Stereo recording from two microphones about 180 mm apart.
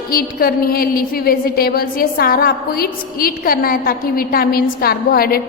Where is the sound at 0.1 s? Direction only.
55° left (ahead or behind).